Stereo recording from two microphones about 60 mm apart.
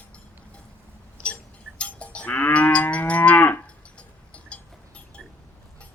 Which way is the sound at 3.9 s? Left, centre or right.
Centre.